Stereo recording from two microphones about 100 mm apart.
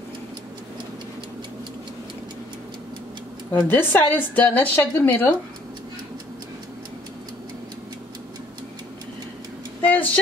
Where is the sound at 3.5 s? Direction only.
20° left (ahead or behind).